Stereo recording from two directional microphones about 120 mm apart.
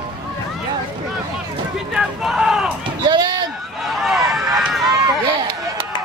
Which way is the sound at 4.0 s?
5° right (ahead or behind).